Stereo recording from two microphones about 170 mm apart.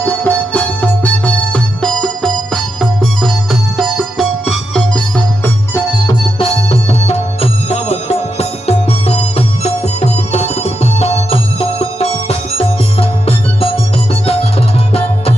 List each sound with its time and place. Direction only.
0.0 s music: 10° left (ahead or behind)
6.4 s music: 35° left (ahead or behind)